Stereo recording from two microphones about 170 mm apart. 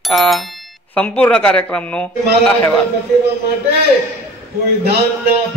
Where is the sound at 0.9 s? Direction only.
10° left (ahead or behind).